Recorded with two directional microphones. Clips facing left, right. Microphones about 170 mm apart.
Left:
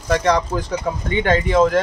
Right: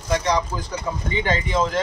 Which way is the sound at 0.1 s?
65° left (ahead or behind).